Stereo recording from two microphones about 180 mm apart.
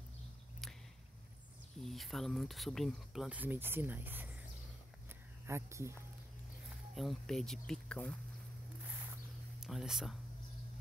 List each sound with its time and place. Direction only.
1.8 s speech: centre (ahead or behind)
5.5 s speech: 15° right (ahead or behind)
6.7 s speech: centre (ahead or behind)
9.6 s speech: centre (ahead or behind)